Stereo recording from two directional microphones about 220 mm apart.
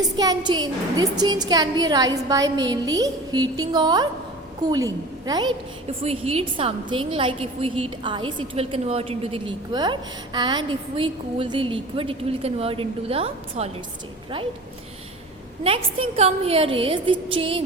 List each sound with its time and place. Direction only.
0.2 s a woman's voice: 20° right (ahead or behind)
15.6 s a woman's voice: 25° right (ahead or behind)